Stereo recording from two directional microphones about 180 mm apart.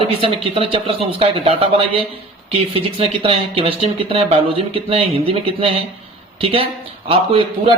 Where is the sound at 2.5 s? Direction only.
30° right (ahead or behind).